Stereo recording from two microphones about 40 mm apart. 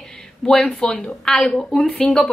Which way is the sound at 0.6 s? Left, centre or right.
Left.